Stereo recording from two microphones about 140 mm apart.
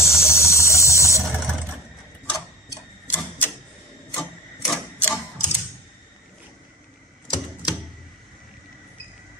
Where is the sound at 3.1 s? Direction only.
15° left (ahead or behind).